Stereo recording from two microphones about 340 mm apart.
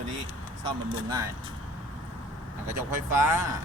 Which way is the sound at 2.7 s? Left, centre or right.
Centre.